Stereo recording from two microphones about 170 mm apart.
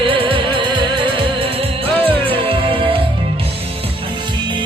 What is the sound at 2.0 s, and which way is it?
Music, 35° right (ahead or behind).